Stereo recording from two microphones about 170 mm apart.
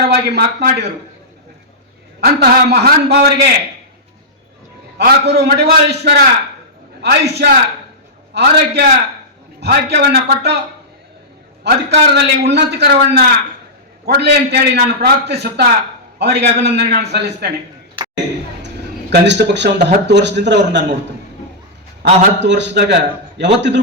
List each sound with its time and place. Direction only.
0.1 s a man's voice: 70° right (ahead or behind)
2.2 s a man's voice: 65° right (ahead or behind)
4.9 s a man's voice: 75° right (ahead or behind)
11.6 s a man's voice: 80° right
18.0 s a sound: 30° right (ahead or behind)
19.1 s a man's voice: 90° right
22.0 s a man's voice: 90° right